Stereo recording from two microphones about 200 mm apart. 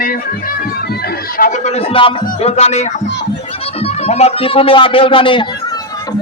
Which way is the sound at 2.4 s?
30° left (ahead or behind).